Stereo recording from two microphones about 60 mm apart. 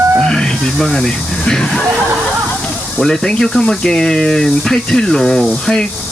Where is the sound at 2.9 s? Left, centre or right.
Centre.